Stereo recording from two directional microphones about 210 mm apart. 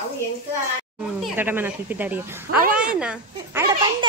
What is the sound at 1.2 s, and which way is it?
A woman's voice, 10° right (ahead or behind).